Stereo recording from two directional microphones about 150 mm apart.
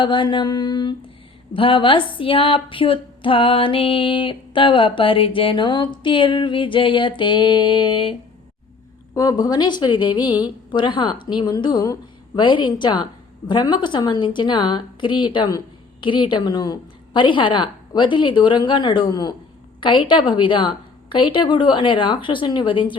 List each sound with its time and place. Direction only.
0.0 s a woman's voice: 30° left (ahead or behind)
9.1 s a woman's voice: 25° left (ahead or behind)